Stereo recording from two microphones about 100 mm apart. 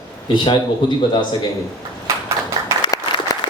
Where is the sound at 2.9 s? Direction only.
35° left (ahead or behind).